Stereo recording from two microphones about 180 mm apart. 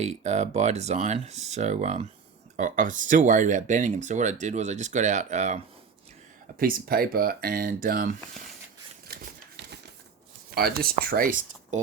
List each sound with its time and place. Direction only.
0.0 s speech: 40° right (ahead or behind)
6.6 s speech: 55° right (ahead or behind)
10.5 s speech: 60° right (ahead or behind)